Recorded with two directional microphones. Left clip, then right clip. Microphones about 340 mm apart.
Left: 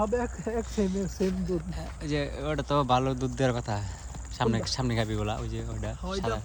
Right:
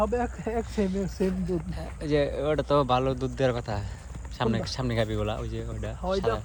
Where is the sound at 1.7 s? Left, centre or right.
Centre.